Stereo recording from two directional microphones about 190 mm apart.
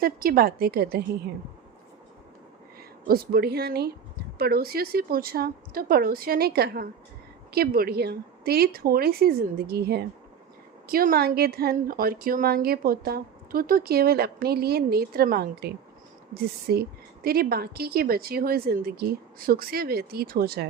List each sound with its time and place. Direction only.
0.0 s speech: 50° right (ahead or behind)
3.1 s speech: 55° right (ahead or behind)